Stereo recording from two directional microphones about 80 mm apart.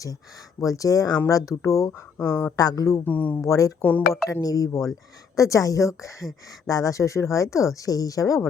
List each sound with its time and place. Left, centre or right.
0.6 s speech: left
2.4 s speech: left
3.0 s speech: left
3.4 s speech: left
3.8 s speech: left
4.4 s speech: left